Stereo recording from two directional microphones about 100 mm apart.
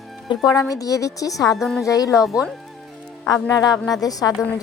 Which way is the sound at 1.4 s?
Centre (ahead or behind).